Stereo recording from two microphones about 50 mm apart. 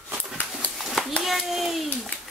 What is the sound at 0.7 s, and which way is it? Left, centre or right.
Hands, centre.